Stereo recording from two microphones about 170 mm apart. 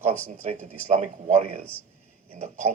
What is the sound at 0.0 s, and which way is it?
Speech, 40° right (ahead or behind).